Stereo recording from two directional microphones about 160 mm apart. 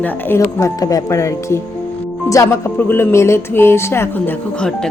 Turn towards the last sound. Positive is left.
turn(degrees=10)  # may be behind; listen again after turning